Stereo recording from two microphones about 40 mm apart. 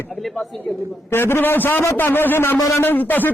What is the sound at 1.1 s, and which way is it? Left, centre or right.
A man's voice, left.